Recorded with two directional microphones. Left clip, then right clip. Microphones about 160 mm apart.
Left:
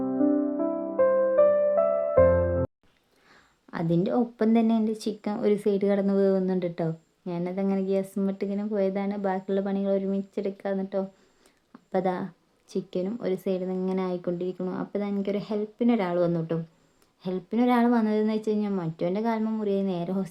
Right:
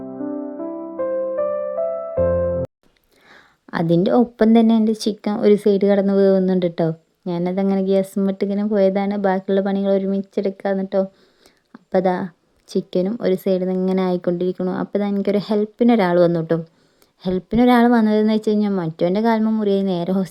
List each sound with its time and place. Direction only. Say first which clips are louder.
0.3 s music: right 1 dB; 5° left (ahead or behind)
3.2 s speech: right 10 dB; 40° right (ahead or behind)